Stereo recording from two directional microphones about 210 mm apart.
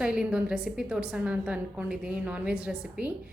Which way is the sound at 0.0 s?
5° right (ahead or behind).